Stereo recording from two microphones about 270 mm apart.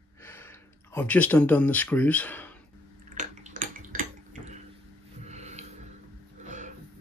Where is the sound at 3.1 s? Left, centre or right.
Right.